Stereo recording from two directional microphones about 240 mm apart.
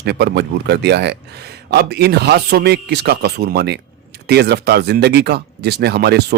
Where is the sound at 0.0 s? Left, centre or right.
Right.